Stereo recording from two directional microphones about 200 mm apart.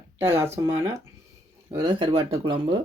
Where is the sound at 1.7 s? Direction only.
25° right (ahead or behind).